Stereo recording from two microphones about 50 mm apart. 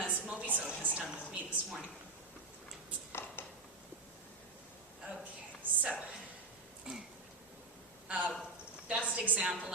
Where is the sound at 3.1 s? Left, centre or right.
Left.